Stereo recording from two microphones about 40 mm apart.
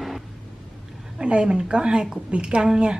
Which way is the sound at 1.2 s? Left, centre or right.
Right.